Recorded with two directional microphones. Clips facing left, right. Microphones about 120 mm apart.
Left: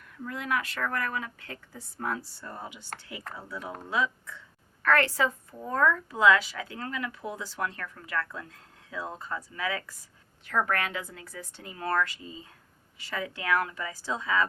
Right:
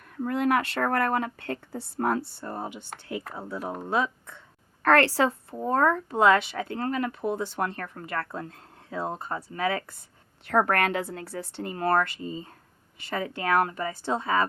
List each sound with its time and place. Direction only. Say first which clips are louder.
0.2 s speech: right 8 dB; 55° right (ahead or behind)
2.4 s speech: right 7 dB; 30° right (ahead or behind)
2.6 s speech: right 6 dB; 55° right (ahead or behind)
3.6 s speech: right 7 dB; 40° right (ahead or behind)
3.8 s speech: right 2 dB; 50° right (ahead or behind)
4.9 s a woman's voice: right 4 dB; 70° right (ahead or behind)
5.5 s speech: right 3 dB; 60° right (ahead or behind)
6.7 s speech: right 8 dB; 45° right (ahead or behind)
13.9 s speech: right 1 dB; 60° right (ahead or behind)